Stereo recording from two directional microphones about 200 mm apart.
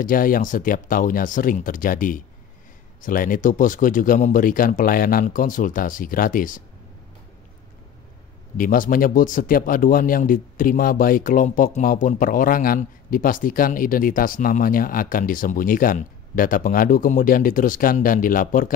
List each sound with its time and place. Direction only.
0.0 s a man's voice: 45° left (ahead or behind)
8.5 s a man's voice: 45° left (ahead or behind)